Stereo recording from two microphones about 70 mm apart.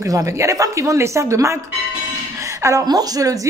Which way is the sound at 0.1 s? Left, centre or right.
Right.